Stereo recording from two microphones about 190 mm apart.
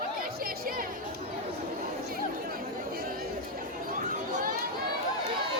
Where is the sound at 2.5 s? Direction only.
50° right (ahead or behind).